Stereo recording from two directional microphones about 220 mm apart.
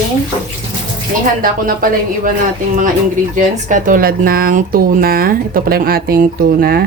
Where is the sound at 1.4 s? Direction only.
40° right (ahead or behind).